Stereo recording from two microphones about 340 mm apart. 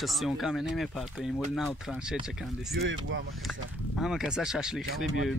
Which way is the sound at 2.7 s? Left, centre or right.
Right.